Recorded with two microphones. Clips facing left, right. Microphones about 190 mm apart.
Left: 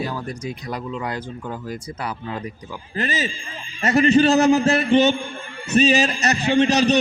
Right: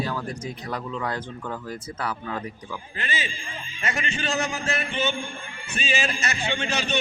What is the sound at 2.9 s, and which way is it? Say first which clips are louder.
A man's voice: left 9 dB; 40° left (ahead or behind).